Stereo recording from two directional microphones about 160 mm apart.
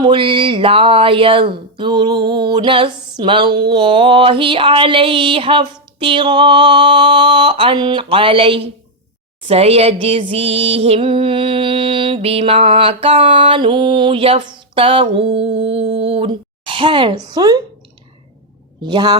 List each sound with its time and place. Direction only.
0.0 s mantra: 30° right (ahead or behind)
18.9 s speech: 25° right (ahead or behind)